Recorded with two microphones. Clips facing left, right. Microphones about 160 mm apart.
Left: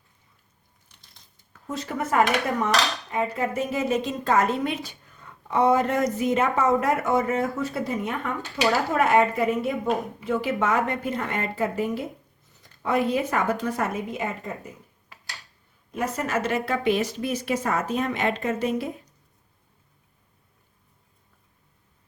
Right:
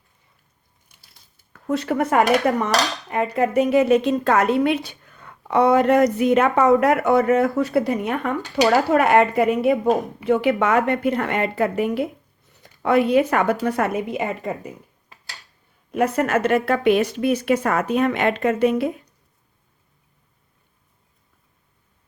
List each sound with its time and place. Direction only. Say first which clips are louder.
0.9 s a sound: even; 5° right (ahead or behind)
1.5 s a woman's voice: right 9 dB; 65° right (ahead or behind)
15.9 s speech: right 8 dB; 65° right (ahead or behind)